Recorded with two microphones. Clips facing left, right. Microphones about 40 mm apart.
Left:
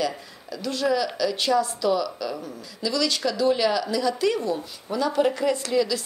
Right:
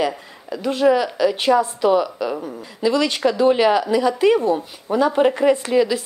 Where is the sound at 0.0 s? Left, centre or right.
Right.